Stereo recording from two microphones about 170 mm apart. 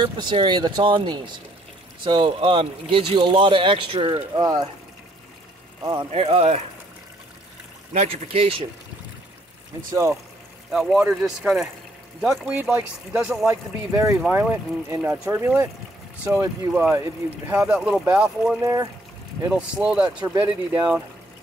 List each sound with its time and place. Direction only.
0.0 s speech: 30° right (ahead or behind)
5.8 s speech: 25° right (ahead or behind)
6.2 s speech: 35° right (ahead or behind)
7.9 s speech: 40° right (ahead or behind)
10.7 s speech: centre (ahead or behind)
18.6 s speech: 20° right (ahead or behind)
19.4 s speech: 5° right (ahead or behind)